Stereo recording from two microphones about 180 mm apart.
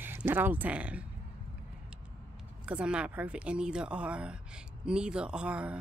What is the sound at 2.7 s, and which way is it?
A woman's voice, 5° right (ahead or behind).